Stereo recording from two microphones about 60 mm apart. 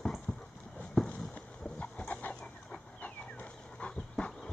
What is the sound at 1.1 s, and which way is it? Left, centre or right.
Chicken, left.